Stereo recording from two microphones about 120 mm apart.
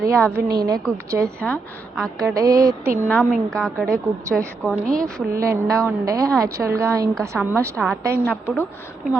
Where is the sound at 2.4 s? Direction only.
30° right (ahead or behind).